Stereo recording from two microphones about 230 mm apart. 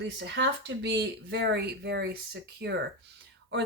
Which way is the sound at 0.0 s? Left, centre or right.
Right.